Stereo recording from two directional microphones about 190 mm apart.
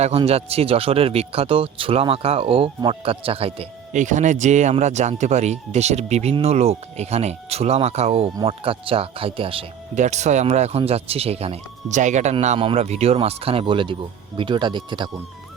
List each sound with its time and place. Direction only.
0.0 s speech: 30° right (ahead or behind)